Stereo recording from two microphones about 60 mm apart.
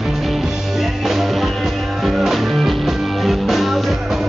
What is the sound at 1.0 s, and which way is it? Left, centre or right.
Music, centre.